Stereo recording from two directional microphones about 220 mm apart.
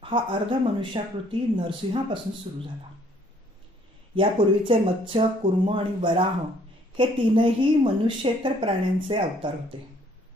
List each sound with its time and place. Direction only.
0.0 s speech: 20° right (ahead or behind)
4.1 s speech: 25° right (ahead or behind)